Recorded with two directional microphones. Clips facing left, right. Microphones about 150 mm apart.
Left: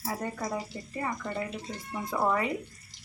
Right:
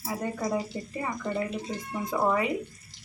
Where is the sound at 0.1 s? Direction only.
15° right (ahead or behind).